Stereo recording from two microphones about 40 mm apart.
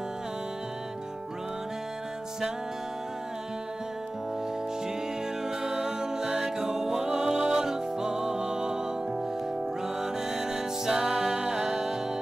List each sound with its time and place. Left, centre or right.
5.6 s music: centre
10.3 s music: centre